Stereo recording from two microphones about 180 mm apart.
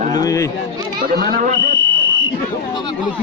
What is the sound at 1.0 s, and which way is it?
Speech, 55° right (ahead or behind).